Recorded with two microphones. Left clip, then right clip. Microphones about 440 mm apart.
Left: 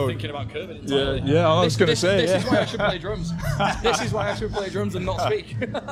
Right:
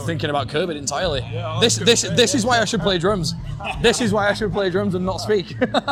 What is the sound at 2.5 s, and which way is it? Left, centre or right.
Speech, right.